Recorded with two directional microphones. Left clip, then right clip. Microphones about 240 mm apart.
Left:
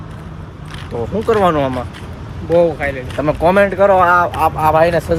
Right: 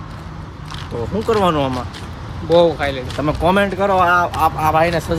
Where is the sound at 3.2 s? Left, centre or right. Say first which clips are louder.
Left 4 dB; centre.